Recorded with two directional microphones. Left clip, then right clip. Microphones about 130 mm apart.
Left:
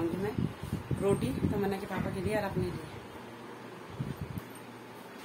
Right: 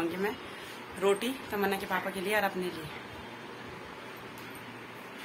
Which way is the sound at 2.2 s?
Centre (ahead or behind).